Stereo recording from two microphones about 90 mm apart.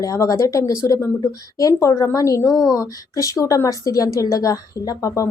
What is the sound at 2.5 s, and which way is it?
Speech, centre (ahead or behind).